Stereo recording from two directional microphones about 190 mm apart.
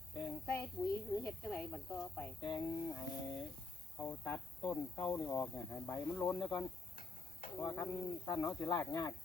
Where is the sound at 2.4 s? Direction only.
25° left (ahead or behind).